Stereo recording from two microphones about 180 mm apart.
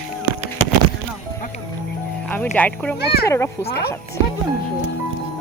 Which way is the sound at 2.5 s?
10° left (ahead or behind).